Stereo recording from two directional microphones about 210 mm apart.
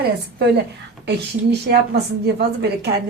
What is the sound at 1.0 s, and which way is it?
A woman's voice, 50° right (ahead or behind).